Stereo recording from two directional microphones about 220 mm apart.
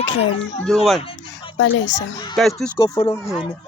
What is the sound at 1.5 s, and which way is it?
Speech, 55° left (ahead or behind).